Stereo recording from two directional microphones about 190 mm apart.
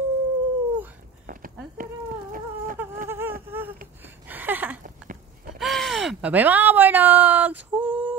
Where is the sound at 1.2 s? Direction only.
45° right (ahead or behind).